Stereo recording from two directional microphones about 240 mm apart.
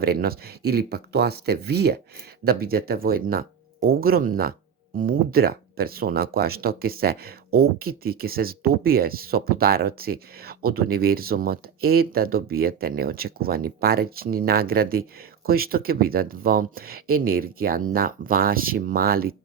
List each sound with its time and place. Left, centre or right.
0.0 s speech: right